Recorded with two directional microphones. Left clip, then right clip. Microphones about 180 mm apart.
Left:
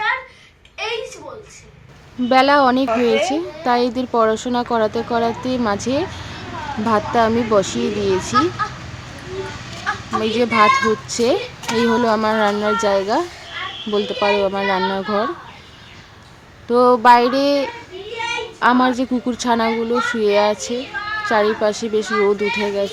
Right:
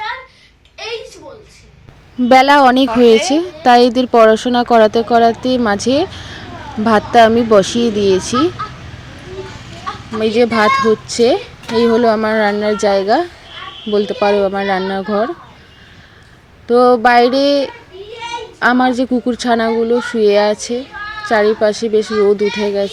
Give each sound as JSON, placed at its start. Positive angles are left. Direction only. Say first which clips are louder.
{"t": 2.3, "sound": "speech", "louder": "right 5 dB", "side_deg": -40}
{"t": 10.2, "sound": "a child's voice", "louder": "right 3 dB", "side_deg": -20}
{"t": 16.6, "sound": "a child's voice", "louder": "right 2 dB", "side_deg": -20}